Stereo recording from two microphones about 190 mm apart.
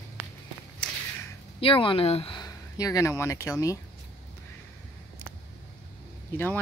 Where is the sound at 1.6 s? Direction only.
30° left (ahead or behind).